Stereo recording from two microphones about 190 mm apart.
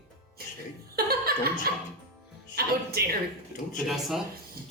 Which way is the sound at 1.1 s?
55° right (ahead or behind).